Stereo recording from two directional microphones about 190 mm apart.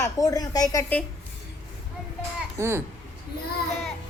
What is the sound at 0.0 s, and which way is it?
A woman's voice, 15° left (ahead or behind).